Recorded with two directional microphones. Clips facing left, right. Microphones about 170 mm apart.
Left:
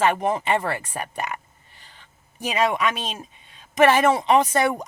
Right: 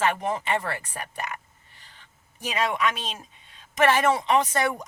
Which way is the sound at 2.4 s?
15° left (ahead or behind).